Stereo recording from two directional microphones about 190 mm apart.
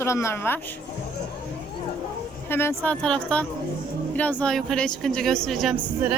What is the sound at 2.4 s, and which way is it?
Speech, 10° left (ahead or behind).